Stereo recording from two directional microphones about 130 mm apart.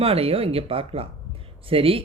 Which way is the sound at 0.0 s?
50° right (ahead or behind).